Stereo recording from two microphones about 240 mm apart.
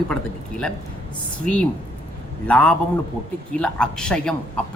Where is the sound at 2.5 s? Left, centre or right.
Centre.